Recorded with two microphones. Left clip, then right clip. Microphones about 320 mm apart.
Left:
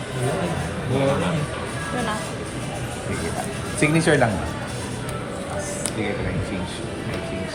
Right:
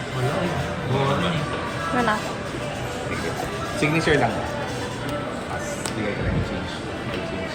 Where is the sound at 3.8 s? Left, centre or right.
Left.